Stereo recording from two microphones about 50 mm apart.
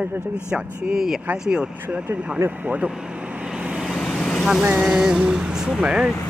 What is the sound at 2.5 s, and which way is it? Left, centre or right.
Speech, right.